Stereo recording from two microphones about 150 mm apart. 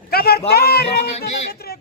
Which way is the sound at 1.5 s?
90° left.